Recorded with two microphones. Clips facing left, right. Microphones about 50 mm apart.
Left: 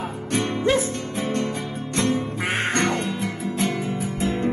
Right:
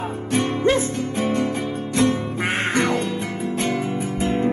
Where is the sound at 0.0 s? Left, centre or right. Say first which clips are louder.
Right 3 dB; centre.